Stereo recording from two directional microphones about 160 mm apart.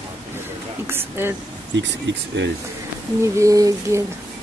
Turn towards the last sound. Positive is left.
turn(degrees=-20)  # may be behind; listen again after turning